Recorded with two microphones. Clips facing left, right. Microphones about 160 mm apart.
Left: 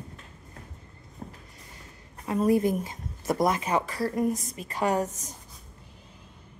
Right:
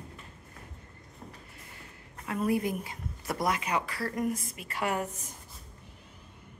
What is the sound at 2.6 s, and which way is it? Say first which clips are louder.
A woman's voice: left 6 dB; 45° left (ahead or behind).